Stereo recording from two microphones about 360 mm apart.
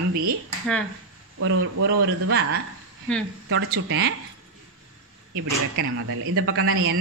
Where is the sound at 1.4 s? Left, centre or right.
Right.